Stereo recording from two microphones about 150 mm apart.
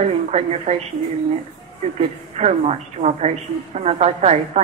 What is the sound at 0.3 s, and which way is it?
Speech, 45° right (ahead or behind).